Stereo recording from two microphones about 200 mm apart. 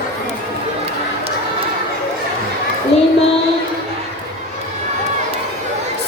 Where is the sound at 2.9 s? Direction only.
30° left (ahead or behind).